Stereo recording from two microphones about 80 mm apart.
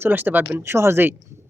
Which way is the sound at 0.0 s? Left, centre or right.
Right.